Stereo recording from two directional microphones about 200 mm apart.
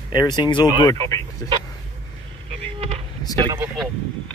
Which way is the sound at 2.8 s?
30° right (ahead or behind).